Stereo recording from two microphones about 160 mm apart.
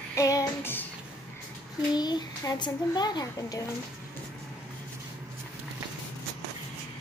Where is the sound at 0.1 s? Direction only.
20° left (ahead or behind).